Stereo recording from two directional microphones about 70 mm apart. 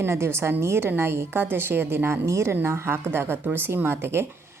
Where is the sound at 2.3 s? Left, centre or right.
Right.